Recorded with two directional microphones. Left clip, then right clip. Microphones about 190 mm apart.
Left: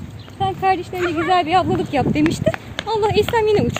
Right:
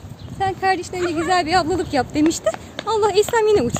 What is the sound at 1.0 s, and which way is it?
Speech, 20° right (ahead or behind).